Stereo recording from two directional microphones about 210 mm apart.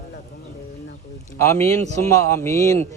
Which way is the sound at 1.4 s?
15° left (ahead or behind).